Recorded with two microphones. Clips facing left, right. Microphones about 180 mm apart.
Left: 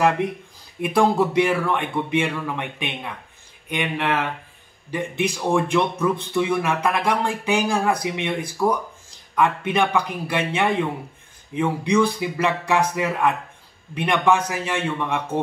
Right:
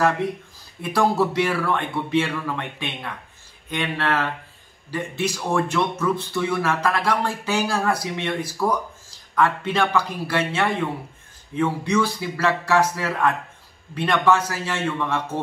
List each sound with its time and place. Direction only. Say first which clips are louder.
0.7 s speech: left 2 dB; 15° left (ahead or behind)